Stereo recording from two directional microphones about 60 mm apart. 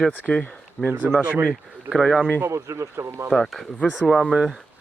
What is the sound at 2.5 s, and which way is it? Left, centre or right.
Speech, right.